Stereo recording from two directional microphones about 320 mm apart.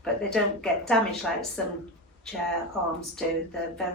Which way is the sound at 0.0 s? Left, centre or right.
Centre.